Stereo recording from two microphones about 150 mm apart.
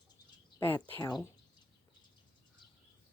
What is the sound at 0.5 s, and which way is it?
Speech, 15° left (ahead or behind).